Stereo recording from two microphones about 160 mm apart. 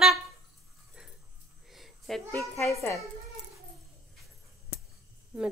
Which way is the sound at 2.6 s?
20° left (ahead or behind).